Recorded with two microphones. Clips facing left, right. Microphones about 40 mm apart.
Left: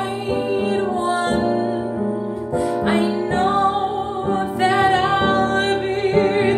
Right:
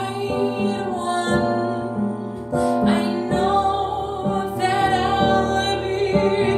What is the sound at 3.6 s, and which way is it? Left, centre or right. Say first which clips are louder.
Music: left 2 dB; left.